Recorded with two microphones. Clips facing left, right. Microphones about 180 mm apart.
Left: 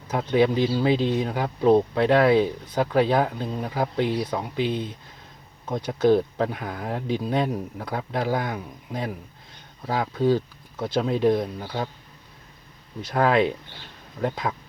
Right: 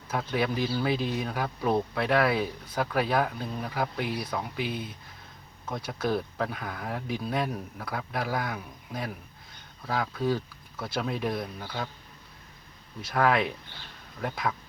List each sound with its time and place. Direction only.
0.1 s speech: 20° left (ahead or behind)
13.0 s speech: 20° left (ahead or behind)